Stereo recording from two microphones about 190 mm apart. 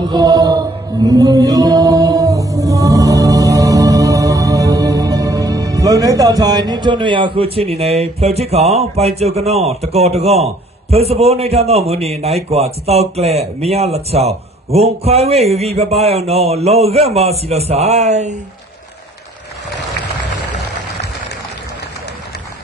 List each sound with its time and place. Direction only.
0.0 s mantra: 20° right (ahead or behind)